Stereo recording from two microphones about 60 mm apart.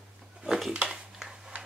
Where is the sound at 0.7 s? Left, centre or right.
Centre.